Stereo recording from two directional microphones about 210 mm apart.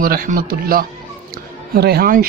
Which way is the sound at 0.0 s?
45° right (ahead or behind).